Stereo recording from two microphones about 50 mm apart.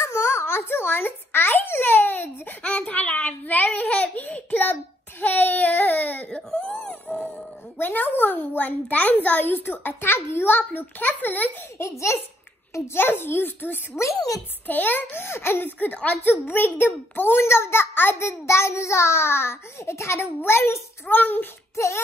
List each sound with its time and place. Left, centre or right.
0.0 s a child's voice: left
2.6 s a child's voice: left
6.2 s whimper: left
7.7 s a child's voice: left
11.8 s a child's voice: left
12.9 s a child's voice: left
14.0 s a child's voice: left
14.7 s a child's voice: left
15.2 s a child's voice: left
17.4 s a child's voice: left
18.2 s a child's voice: left
21.1 s a child's voice: left
21.7 s a sound: left